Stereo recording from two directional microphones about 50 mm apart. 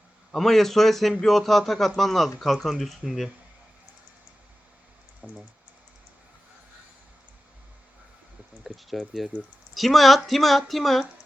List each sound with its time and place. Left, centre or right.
0.3 s a man's voice: centre
5.2 s speech: centre
8.6 s a man's voice: centre